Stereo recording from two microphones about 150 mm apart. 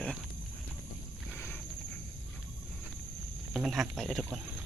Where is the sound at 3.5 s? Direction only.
Centre (ahead or behind).